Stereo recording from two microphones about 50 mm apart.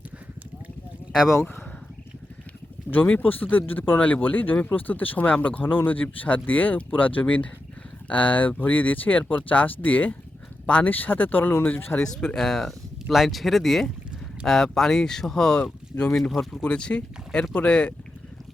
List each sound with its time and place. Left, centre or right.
2.9 s speech: left
5.6 s speech: left
11.9 s speech: centre
16.5 s speech: left